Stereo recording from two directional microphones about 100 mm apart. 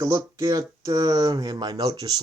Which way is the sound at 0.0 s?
30° right (ahead or behind).